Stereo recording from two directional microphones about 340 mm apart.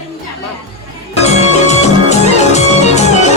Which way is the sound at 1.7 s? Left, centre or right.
Centre.